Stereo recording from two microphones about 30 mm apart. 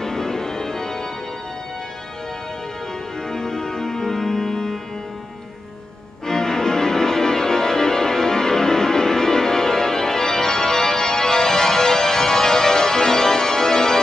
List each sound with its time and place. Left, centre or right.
0.0 s music: centre
3.3 s organ: centre
6.2 s music: centre